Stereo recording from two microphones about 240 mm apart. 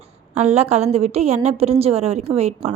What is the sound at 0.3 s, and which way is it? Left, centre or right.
A woman's voice, right.